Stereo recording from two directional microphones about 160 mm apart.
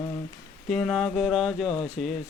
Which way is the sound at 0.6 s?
5° left (ahead or behind).